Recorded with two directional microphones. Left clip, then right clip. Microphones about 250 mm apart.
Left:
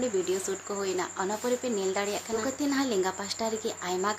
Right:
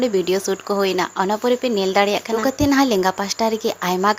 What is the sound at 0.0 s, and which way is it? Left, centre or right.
Speech, right.